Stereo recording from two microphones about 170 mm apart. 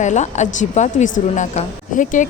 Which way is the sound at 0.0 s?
45° left (ahead or behind).